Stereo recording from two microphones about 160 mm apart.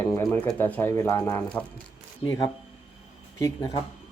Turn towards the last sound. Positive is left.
turn(degrees=20)  # may be behind; listen again after turning